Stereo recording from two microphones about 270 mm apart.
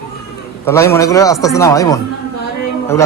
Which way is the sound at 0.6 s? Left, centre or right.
Centre.